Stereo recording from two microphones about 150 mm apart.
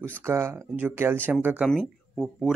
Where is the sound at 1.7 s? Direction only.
Centre (ahead or behind).